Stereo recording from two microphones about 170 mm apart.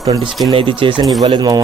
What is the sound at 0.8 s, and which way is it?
Speech, 30° right (ahead or behind).